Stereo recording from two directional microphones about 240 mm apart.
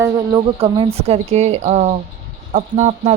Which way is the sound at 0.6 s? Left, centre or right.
Right.